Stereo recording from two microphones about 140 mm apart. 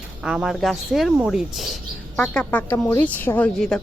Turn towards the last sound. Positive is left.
turn(degrees=5)  # may be behind; listen again after turning